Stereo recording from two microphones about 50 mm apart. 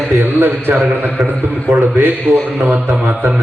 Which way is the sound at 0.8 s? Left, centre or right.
Right.